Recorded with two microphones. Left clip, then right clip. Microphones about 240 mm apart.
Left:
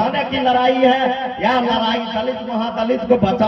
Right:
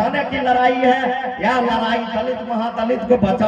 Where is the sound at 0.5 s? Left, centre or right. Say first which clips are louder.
Left 1 dB; centre.